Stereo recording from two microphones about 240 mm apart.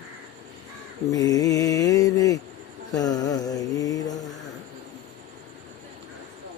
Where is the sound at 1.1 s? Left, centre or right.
Centre.